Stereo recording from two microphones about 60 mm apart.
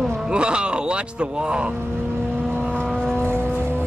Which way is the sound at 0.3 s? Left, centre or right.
Centre.